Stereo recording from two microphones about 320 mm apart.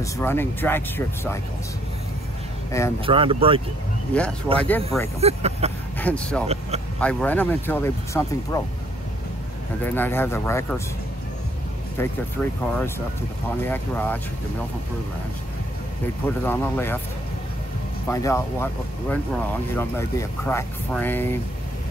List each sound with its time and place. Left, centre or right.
0.0 s speech: centre
2.7 s speech: centre
3.1 s speech: centre
4.6 s speech: centre
5.2 s speech: centre
5.9 s speech: centre
6.4 s speech: centre
7.0 s speech: centre
9.8 s speech: centre
12.0 s speech: centre
13.7 s speech: centre
16.3 s speech: centre
18.0 s speech: centre